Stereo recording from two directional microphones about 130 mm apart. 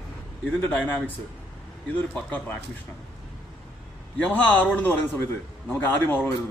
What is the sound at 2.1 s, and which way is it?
Speech, 10° left (ahead or behind).